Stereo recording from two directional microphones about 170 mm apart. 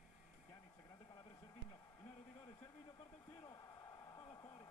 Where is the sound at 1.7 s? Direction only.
15° left (ahead or behind).